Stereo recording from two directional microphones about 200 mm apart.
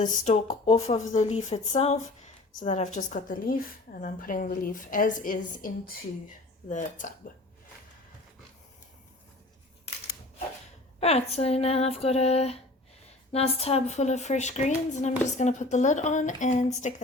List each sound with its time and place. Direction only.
0.0 s speech: 35° left (ahead or behind)
11.0 s speech: 30° left (ahead or behind)